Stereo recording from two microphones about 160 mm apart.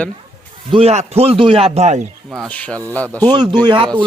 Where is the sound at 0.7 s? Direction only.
40° right (ahead or behind).